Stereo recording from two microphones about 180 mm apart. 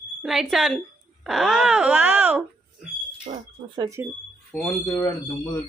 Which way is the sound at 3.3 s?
35° right (ahead or behind).